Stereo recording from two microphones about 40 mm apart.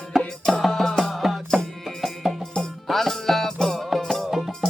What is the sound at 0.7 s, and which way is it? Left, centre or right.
Music, centre.